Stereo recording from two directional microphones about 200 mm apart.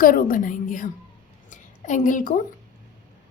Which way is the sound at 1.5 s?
40° left (ahead or behind).